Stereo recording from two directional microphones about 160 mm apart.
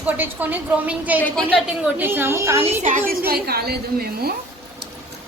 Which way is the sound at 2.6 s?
45° right (ahead or behind).